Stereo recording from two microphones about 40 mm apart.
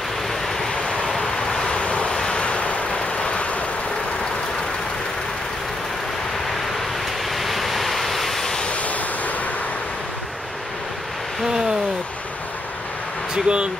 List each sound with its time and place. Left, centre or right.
0.7 s vehicle: left
1.1 s waves: centre; by 2.1 s left
2.1 s vehicle: left
7.3 s waves: centre
8.6 s waves: left
13.3 s speech: right